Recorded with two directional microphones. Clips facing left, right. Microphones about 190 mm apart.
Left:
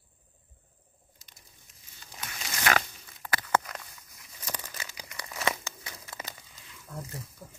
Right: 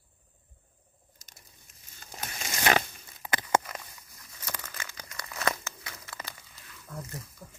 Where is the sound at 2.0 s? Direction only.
45° right (ahead or behind).